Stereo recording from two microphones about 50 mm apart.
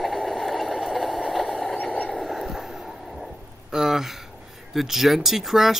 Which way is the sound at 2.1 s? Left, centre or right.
Centre.